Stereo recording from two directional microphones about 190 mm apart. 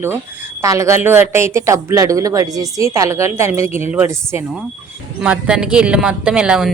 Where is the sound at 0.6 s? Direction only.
15° right (ahead or behind).